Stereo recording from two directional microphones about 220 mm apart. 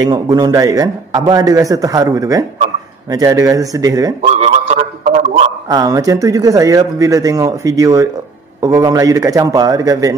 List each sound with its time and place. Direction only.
0.0 s speech: 20° right (ahead or behind)
4.2 s a sound: 30° right (ahead or behind)
5.7 s speech: 15° right (ahead or behind)